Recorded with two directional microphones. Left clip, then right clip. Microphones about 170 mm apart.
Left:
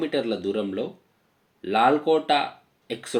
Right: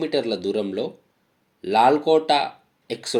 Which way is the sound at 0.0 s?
35° right (ahead or behind).